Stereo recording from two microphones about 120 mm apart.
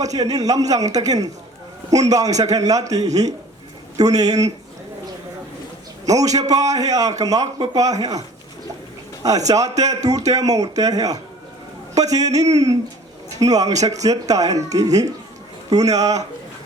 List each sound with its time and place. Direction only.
0.0 s a man's voice: 30° right (ahead or behind)
6.1 s a man's voice: 30° right (ahead or behind)
9.5 s a man's voice: 30° right (ahead or behind)